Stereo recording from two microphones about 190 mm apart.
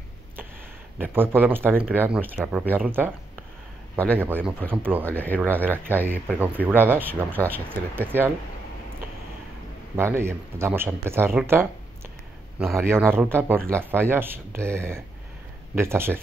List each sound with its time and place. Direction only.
0.9 s speech: 10° right (ahead or behind)
4.2 s speech: 10° right (ahead or behind)
5.0 s speech: 10° left (ahead or behind)
5.4 s speech: 10° right (ahead or behind)
9.9 s speech: 15° right (ahead or behind)
12.9 s speech: 10° right (ahead or behind)